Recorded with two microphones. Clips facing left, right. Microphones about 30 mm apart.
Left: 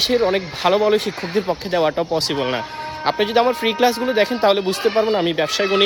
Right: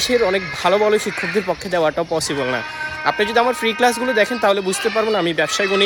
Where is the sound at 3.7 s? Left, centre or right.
Left.